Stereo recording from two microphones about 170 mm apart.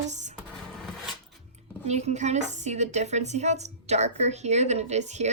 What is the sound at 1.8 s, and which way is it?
A woman's voice, 40° right (ahead or behind).